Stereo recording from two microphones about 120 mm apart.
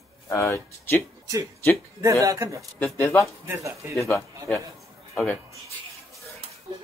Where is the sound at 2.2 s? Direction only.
30° right (ahead or behind).